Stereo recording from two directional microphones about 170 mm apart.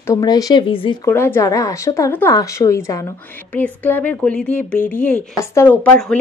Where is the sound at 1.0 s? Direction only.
15° left (ahead or behind).